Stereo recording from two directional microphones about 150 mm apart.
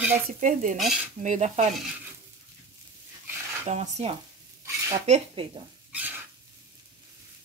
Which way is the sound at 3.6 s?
50° right (ahead or behind).